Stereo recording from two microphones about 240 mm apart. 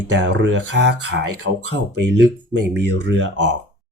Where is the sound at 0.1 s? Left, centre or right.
Right.